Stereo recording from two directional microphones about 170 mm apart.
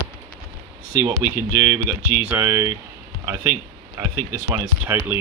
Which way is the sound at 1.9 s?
10° right (ahead or behind).